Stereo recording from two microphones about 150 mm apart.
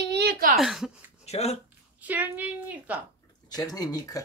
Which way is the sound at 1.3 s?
45° left (ahead or behind).